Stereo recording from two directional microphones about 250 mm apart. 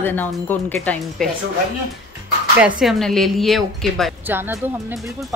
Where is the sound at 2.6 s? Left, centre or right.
Centre.